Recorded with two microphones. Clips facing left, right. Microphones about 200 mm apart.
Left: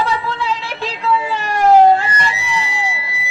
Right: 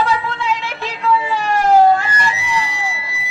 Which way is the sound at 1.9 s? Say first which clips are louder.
Left 1 dB; 30° left (ahead or behind).